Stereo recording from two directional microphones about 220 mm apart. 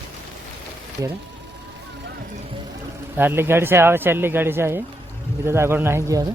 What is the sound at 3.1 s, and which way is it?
Speech, 10° right (ahead or behind).